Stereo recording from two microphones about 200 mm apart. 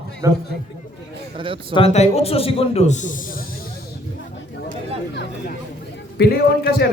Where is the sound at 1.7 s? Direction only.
30° left (ahead or behind).